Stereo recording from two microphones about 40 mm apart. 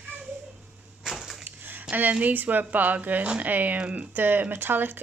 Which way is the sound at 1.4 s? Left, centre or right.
Right.